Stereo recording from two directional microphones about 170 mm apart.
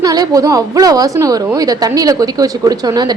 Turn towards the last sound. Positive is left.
turn(degrees=-25)  # may be behind; listen again after turning